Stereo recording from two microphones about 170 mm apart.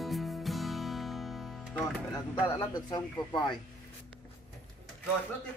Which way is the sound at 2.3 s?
20° left (ahead or behind).